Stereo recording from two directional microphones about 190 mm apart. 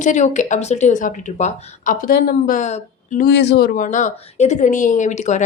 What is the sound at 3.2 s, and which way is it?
Speech, 65° left (ahead or behind).